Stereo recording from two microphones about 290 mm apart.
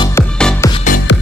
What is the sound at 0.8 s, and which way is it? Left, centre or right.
Music, left.